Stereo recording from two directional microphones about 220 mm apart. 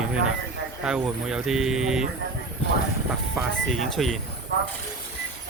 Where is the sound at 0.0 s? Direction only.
5° right (ahead or behind).